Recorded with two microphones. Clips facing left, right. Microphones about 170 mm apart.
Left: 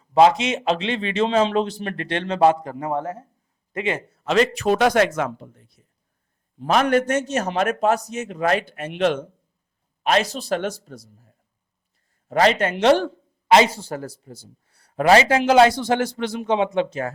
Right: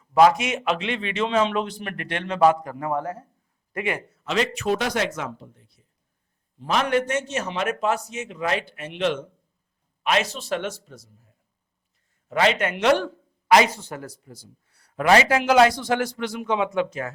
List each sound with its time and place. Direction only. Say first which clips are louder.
0.0 s a man's voice: left 2 dB; 25° left (ahead or behind)
4.2 s speech: left 7 dB; 45° left (ahead or behind)
4.8 s a man's voice: left 8 dB; 50° left (ahead or behind)
12.3 s speech: left 3 dB; 35° left (ahead or behind)